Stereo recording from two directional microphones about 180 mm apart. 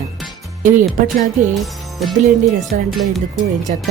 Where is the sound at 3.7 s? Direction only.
45° right (ahead or behind).